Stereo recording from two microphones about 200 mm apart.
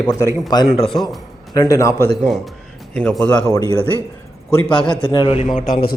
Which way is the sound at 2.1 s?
Centre (ahead or behind).